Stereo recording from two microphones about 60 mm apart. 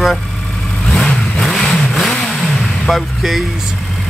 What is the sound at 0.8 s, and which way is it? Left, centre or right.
Vehicle, centre.